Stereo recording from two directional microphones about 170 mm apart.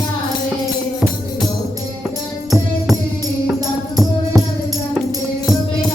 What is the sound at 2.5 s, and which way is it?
Music, centre (ahead or behind).